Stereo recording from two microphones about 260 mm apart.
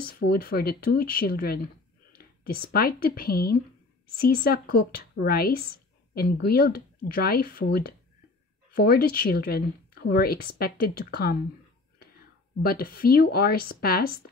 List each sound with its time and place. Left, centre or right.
0.0 s speech: left
12.6 s speech: left